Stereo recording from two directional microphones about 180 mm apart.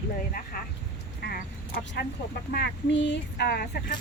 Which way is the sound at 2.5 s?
75° left (ahead or behind).